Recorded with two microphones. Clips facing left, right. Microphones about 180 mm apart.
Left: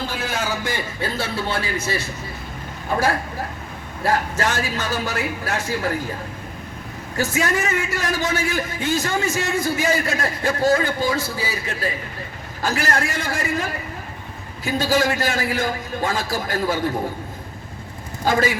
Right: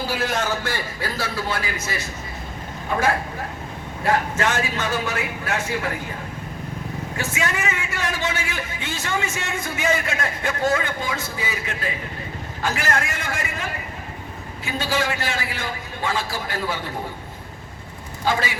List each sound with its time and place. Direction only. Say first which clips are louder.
0.1 s a man's voice: right 2 dB; centre (ahead or behind); by 5.9 s 35° left (ahead or behind)
7.2 s a man's voice: left 5 dB; 40° left (ahead or behind)
18.3 s a man's voice: left 4 dB; 45° left (ahead or behind)